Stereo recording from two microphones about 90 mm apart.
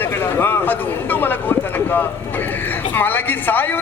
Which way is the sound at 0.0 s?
25° left (ahead or behind).